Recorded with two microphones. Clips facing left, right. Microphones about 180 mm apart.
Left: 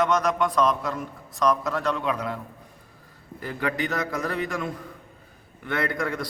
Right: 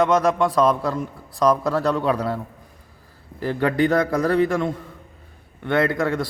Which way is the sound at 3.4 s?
35° right (ahead or behind).